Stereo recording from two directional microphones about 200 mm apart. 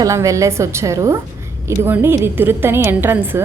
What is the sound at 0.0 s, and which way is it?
A woman's voice, 15° right (ahead or behind).